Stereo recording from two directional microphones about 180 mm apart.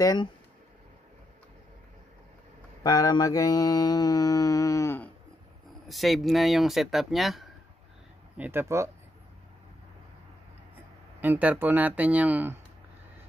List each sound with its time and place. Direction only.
0.0 s mantra: 20° left (ahead or behind)
2.8 s mantra: 20° left (ahead or behind)
5.9 s speech: centre (ahead or behind)
8.4 s speech: 15° right (ahead or behind)
11.1 s speech: 10° right (ahead or behind)